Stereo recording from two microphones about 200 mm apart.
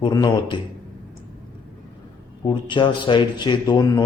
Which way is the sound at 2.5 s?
25° left (ahead or behind).